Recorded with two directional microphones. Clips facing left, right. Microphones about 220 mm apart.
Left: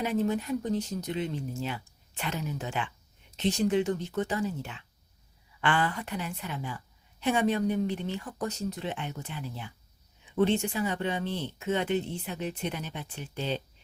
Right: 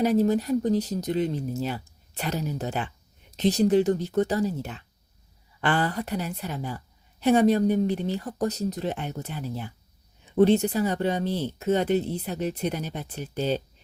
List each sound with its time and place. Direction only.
0.0 s a woman's voice: 40° right (ahead or behind)